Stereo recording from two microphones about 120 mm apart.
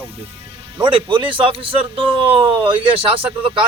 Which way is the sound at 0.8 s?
45° right (ahead or behind).